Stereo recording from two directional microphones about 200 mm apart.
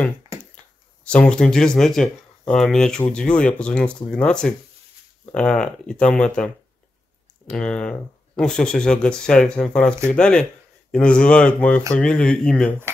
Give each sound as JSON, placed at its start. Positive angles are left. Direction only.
{"t": 1.0, "sound": "speech", "side_deg": 5}